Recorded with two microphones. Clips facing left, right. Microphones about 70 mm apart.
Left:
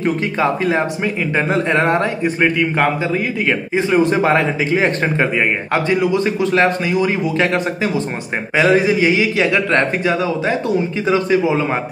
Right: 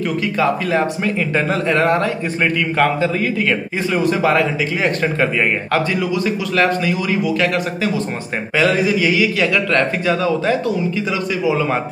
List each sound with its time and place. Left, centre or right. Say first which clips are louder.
0.0 s a man's voice: left 1 dB; left
3.7 s a man's voice: left 7 dB; left
11.1 s a man's voice: left 7 dB; left